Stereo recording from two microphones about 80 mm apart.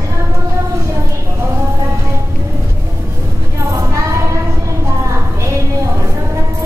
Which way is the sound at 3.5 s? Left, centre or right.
Right.